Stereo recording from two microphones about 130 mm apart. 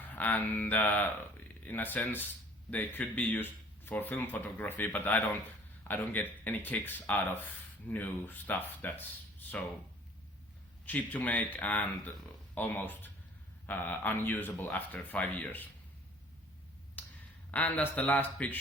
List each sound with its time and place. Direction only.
0.0 s speech: 15° left (ahead or behind)
10.8 s speech: 15° left (ahead or behind)
17.0 s a sound: 15° left (ahead or behind)
17.5 s speech: 10° left (ahead or behind)